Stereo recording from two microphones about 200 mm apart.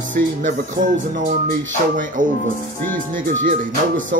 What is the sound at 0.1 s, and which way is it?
Speech, 40° right (ahead or behind).